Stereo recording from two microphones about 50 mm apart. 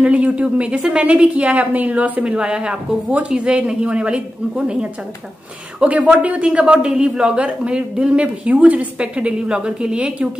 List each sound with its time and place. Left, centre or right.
0.0 s a man's voice: right
2.2 s a man's voice: centre
5.8 s a man's voice: right